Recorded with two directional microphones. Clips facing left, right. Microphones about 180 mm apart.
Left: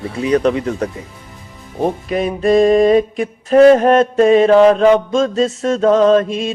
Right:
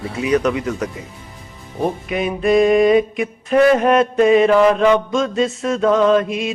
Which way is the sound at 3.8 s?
45° left (ahead or behind).